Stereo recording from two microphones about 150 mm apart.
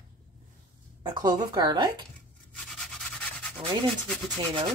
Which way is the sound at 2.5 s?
5° left (ahead or behind).